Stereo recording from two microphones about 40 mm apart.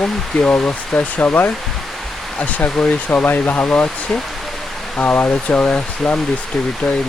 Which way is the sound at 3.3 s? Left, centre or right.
Left.